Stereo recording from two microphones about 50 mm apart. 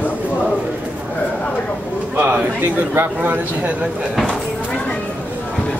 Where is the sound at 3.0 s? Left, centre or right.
Right.